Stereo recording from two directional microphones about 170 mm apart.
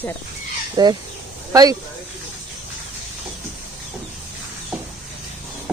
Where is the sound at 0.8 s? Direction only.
25° right (ahead or behind).